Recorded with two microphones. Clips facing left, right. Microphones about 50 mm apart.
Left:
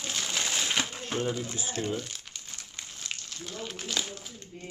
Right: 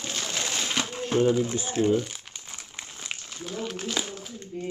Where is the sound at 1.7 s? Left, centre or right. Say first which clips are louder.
Right 10 dB; centre.